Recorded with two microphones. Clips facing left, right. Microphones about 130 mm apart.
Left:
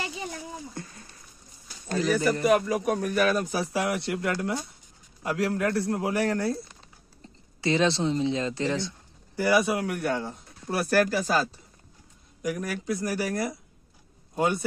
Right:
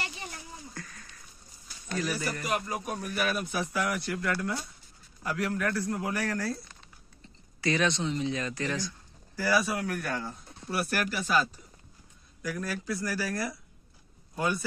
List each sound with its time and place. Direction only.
0.7 s a sound: 25° left (ahead or behind)
2.0 s speech: 25° left (ahead or behind)
2.4 s speech: 70° left (ahead or behind)
3.2 s speech: 40° left (ahead or behind); by 6.6 s 25° left (ahead or behind)
7.6 s speech: 25° left (ahead or behind)
10.7 s speech: 40° left (ahead or behind)
12.4 s speech: 20° left (ahead or behind)